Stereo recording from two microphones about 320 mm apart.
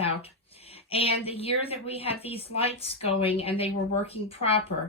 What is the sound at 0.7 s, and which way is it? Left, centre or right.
A woman's voice, centre.